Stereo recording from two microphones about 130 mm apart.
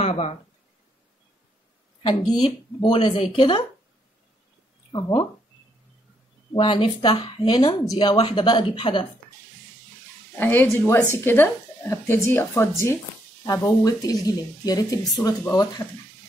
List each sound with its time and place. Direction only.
0.0 s speech: 50° left (ahead or behind)
2.0 s speech: 35° left (ahead or behind)
4.9 s speech: 35° left (ahead or behind)
6.5 s speech: 40° left (ahead or behind)
10.3 s a woman's voice: 15° left (ahead or behind)